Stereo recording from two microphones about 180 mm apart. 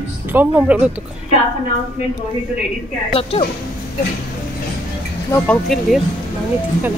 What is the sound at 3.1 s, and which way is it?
Speech, 30° left (ahead or behind).